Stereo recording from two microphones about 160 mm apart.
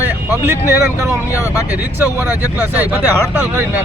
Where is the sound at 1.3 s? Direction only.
20° left (ahead or behind).